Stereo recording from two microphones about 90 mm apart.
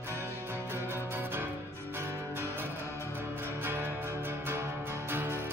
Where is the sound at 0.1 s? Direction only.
25° right (ahead or behind).